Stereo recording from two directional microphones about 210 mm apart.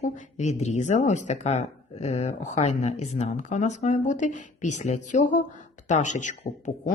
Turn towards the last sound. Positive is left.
turn(degrees=35)  # may be behind; listen again after turning